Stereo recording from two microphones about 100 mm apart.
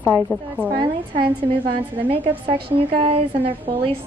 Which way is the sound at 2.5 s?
65° right (ahead or behind).